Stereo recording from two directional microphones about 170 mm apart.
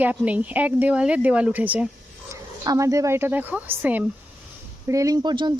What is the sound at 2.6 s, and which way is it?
Speech, 20° right (ahead or behind).